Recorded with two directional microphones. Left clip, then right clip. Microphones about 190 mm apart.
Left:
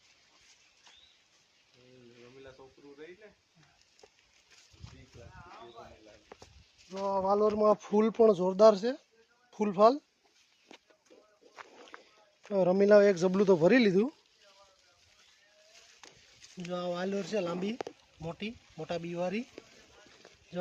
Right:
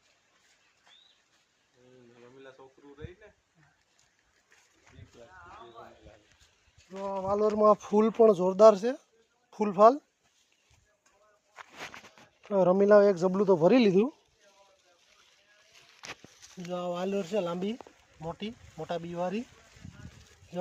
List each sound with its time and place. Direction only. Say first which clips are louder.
2.4 s speech: right 2 dB; 35° right (ahead or behind)
6.9 s speech: left 2 dB; 5° left (ahead or behind)
7.4 s speech: right 3 dB; 10° right (ahead or behind)
12.5 s speech: right 2 dB; centre (ahead or behind)
13.7 s speech: right 2 dB; 5° right (ahead or behind)
16.6 s speech: right 2 dB; 5° right (ahead or behind)